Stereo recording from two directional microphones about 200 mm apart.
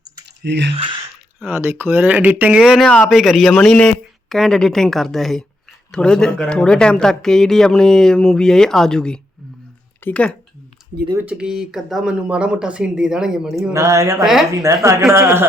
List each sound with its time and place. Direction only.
0.4 s speech: 60° right (ahead or behind)
0.7 s speech: 25° right (ahead or behind)
1.5 s speech: 10° right (ahead or behind); by 10.3 s 5° left (ahead or behind)
11.1 s speech: 10° right (ahead or behind)
13.7 s speech: 15° right (ahead or behind)